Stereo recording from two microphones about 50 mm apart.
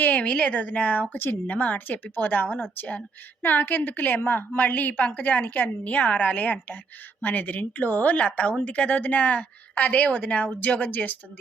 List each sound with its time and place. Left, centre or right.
0.0 s a woman's voice: left